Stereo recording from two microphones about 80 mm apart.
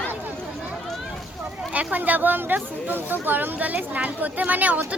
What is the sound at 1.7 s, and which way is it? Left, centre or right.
A woman's voice, centre.